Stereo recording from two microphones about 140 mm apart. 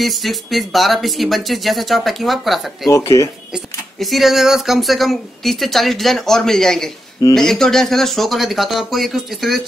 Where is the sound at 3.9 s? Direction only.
Centre (ahead or behind).